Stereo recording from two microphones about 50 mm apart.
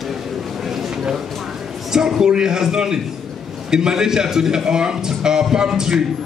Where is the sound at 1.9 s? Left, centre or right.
Centre.